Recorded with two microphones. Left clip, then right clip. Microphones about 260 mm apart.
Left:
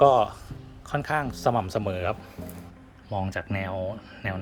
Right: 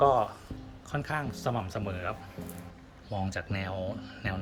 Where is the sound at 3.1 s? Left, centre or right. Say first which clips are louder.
Left 5 dB; centre.